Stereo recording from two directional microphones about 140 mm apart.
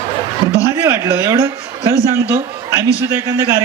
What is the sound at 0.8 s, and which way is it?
A man's voice, 20° right (ahead or behind).